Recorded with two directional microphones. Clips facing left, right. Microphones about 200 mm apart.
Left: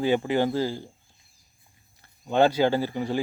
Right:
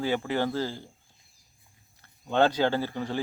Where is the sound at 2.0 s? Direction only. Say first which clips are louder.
Left 3 dB; 10° left (ahead or behind).